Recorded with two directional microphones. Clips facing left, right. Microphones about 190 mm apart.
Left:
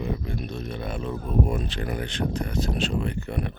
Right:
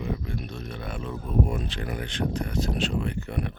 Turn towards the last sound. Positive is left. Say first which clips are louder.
# left 1 dB
turn(degrees=30)  # may be behind; listen again after turning